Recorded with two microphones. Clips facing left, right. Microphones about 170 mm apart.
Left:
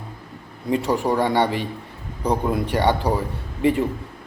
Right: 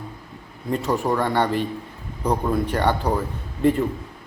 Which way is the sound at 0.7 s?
10° left (ahead or behind).